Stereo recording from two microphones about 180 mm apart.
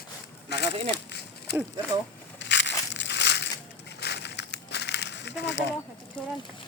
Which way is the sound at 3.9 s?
70° left (ahead or behind).